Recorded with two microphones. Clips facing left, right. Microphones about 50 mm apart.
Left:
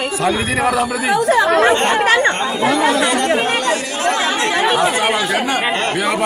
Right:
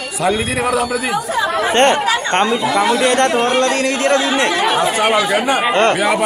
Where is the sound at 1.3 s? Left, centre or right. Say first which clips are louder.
Left 7 dB; left.